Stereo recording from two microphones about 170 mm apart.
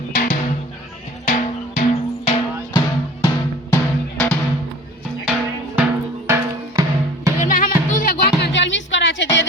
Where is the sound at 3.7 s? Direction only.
10° left (ahead or behind).